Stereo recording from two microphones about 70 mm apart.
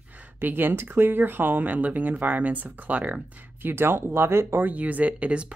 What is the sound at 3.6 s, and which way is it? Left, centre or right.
Speech, right.